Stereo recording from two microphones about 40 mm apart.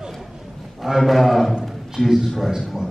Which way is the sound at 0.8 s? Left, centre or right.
Centre.